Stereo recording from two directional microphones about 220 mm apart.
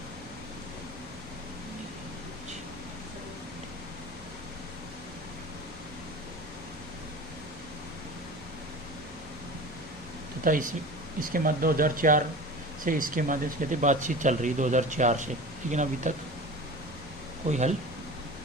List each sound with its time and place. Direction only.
10.4 s speech: 40° right (ahead or behind)
17.5 s speech: 30° right (ahead or behind)